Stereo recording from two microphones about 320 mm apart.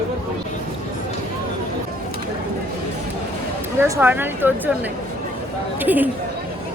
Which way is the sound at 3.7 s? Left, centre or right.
Centre.